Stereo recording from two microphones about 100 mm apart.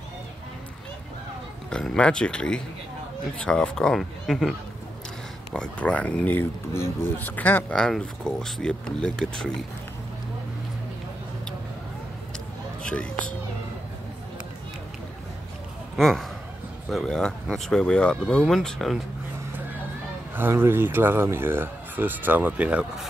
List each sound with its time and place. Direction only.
1.7 s speech: 10° left (ahead or behind)
7.8 s speech: 5° left (ahead or behind)
12.8 s speech: 10° left (ahead or behind)
16.0 s speech: 5° left (ahead or behind)
20.3 s speech: 25° right (ahead or behind)